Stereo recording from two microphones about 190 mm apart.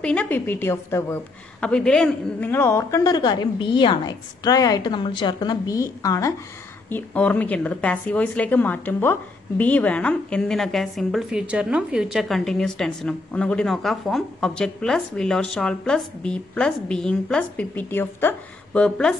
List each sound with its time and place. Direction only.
0.0 s a woman's voice: 5° left (ahead or behind)